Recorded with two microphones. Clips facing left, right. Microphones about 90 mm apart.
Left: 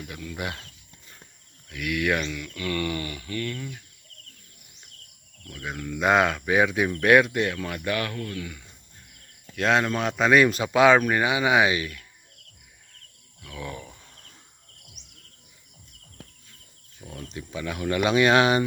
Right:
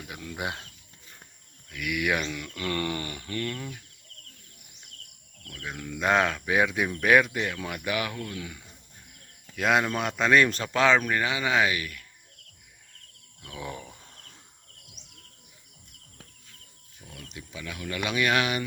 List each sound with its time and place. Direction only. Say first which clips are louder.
0.1 s speech: right 1 dB; 15° right (ahead or behind)
1.7 s speech: left 2 dB; centre (ahead or behind)
2.2 s speech: left 1 dB; 20° right (ahead or behind)
5.5 s speech: left 4 dB; 5° left (ahead or behind)
8.4 s speech: left 3 dB; 20° right (ahead or behind)
9.6 s speech: left 2 dB; 5° right (ahead or behind); by 12.0 s 25° left (ahead or behind)
13.4 s wild animals: left 1 dB; 25° right (ahead or behind)
17.1 s speech: left 7 dB; 35° left (ahead or behind)